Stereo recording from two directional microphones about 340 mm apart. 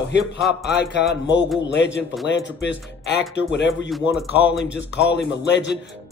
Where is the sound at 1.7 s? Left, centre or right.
Left.